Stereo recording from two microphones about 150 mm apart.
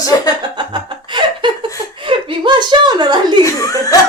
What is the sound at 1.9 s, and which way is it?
Speech, 35° right (ahead or behind).